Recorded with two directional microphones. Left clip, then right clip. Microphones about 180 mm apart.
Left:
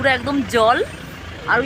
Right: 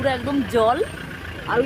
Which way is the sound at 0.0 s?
10° left (ahead or behind).